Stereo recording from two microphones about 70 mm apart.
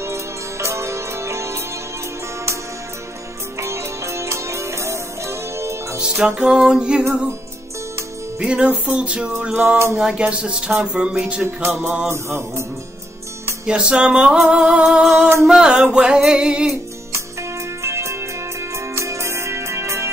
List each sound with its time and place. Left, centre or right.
0.0 s music: right
3.5 s music: right
5.9 s music: centre
8.4 s music: centre
11.4 s music: right
13.7 s music: centre
14.9 s music: centre
17.1 s music: right